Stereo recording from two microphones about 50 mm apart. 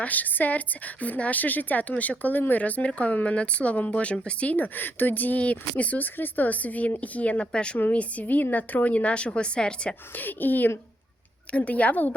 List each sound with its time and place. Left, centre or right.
0.0 s speech: left
4.5 s speech: left; by 9.9 s centre
10.2 s speech: left
11.5 s speech: left